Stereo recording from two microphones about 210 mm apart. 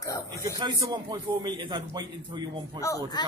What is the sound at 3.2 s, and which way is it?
Speech, 20° left (ahead or behind).